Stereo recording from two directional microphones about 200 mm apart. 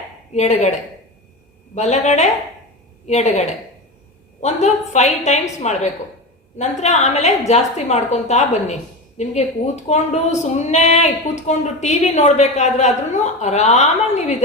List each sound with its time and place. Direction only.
0.3 s a woman's voice: 35° left (ahead or behind)
1.7 s a woman's voice: 35° left (ahead or behind)